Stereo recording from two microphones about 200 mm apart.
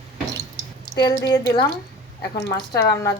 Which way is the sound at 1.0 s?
20° left (ahead or behind).